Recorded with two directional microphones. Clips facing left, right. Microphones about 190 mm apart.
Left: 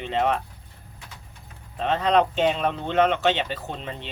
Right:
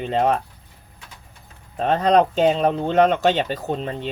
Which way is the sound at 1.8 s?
40° right (ahead or behind).